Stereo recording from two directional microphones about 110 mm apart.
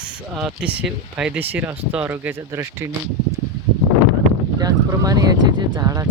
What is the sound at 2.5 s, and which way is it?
Speech, 25° right (ahead or behind).